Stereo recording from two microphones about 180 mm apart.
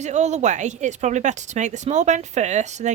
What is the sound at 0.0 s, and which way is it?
Speech, 40° right (ahead or behind).